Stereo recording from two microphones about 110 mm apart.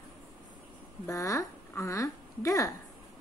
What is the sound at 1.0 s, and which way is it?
A woman's voice, 30° left (ahead or behind).